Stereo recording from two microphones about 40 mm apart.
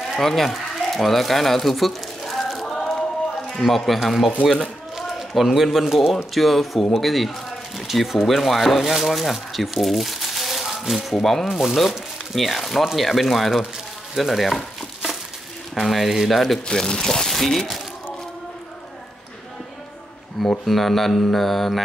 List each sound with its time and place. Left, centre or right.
0.1 s bird: centre
2.8 s a sound: centre
3.5 s mantra: centre
4.9 s a sound: centre
6.3 s speech: centre
10.6 s rattle: centre
11.4 s speech: centre
12.8 s mantra: centre
15.7 s mantra: centre
16.6 s speech: centre
20.4 s mantra: centre